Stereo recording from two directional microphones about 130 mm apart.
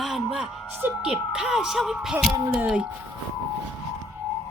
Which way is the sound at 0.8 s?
15° right (ahead or behind).